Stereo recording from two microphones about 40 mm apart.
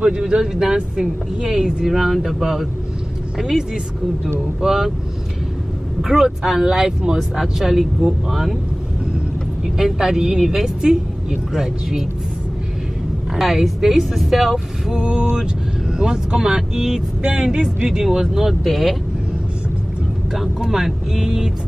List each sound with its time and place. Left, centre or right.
0.0 s speech: right
6.0 s speech: centre
9.8 s speech: centre
13.4 s speech: centre
14.9 s speech: right; by 18.9 s centre
20.3 s speech: centre